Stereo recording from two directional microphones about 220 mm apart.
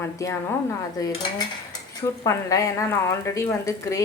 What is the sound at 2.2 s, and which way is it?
A woman's voice, 15° left (ahead or behind).